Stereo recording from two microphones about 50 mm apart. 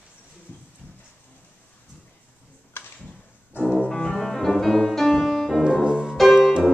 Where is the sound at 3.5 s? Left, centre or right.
Left.